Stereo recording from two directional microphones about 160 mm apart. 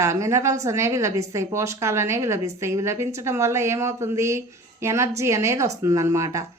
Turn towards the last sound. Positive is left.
turn(degrees=-20)  # may be behind; listen again after turning